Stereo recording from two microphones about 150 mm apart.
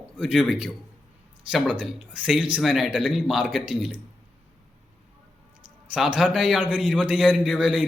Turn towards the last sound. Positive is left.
turn(degrees=-5)  # may be behind; listen again after turning